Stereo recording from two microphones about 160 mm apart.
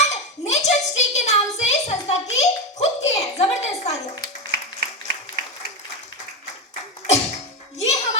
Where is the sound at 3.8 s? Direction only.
25° left (ahead or behind).